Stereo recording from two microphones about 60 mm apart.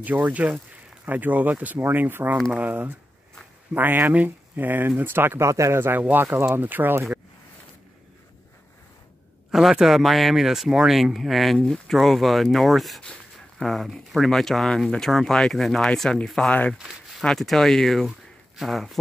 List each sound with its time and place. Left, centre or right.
0.0 s speech: right
5.4 s speech: right
5.8 s speech: right
9.5 s speech: centre
16.4 s speech: left
17.2 s speech: centre